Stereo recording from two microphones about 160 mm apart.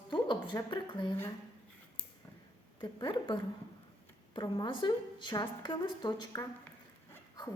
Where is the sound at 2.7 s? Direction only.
30° left (ahead or behind).